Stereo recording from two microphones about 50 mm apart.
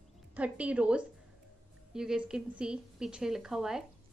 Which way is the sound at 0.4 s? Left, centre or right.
Right.